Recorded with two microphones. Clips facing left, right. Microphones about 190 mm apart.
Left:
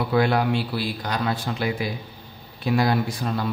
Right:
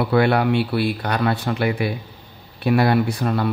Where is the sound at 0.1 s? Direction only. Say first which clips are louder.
Right 3 dB; 65° right (ahead or behind).